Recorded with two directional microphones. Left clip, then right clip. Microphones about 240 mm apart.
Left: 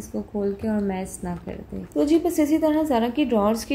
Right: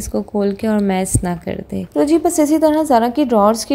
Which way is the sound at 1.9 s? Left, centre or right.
Right.